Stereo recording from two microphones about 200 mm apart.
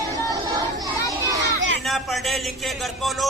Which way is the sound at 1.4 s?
65° right (ahead or behind).